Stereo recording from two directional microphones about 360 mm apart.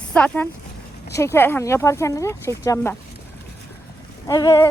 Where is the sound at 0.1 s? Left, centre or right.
Centre.